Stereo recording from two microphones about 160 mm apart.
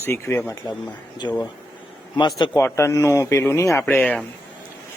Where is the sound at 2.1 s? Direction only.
30° left (ahead or behind).